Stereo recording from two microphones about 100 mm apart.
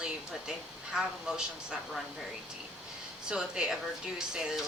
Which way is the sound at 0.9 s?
5° right (ahead or behind).